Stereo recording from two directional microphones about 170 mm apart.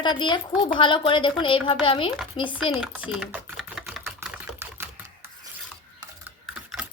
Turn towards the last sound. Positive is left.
turn(degrees=-5)  # may be behind; listen again after turning